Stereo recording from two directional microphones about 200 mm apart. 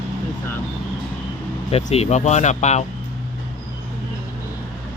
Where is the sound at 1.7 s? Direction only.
30° left (ahead or behind).